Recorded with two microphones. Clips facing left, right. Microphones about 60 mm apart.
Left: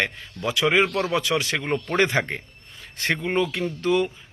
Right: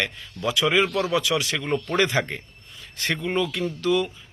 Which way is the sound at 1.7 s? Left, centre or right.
Left.